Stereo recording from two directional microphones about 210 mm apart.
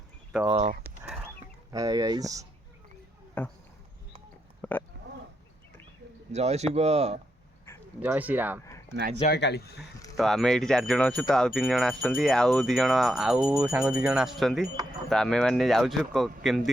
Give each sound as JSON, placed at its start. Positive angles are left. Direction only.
{"t": 0.4, "sound": "speech", "side_deg": -30}
{"t": 1.7, "sound": "speech", "side_deg": -15}
{"t": 3.4, "sound": "speech", "side_deg": 5}
{"t": 4.6, "sound": "a sound", "side_deg": 10}
{"t": 6.3, "sound": "speech", "side_deg": -30}
{"t": 8.0, "sound": "speech", "side_deg": -10}
{"t": 9.2, "sound": "speech", "side_deg": 50}
{"t": 10.2, "sound": "speech", "side_deg": 0}